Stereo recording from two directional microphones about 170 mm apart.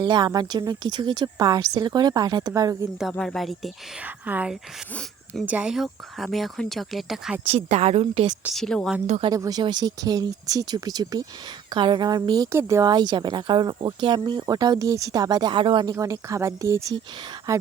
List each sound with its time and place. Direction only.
0.0 s a woman's voice: 25° right (ahead or behind)
3.0 s speech: centre (ahead or behind)
4.0 s speech: 10° right (ahead or behind)
7.4 s a woman's voice: 35° right (ahead or behind)
8.5 s speech: 5° left (ahead or behind)
9.0 s a woman's voice: 40° right (ahead or behind)
9.3 s a woman's voice: 20° right (ahead or behind)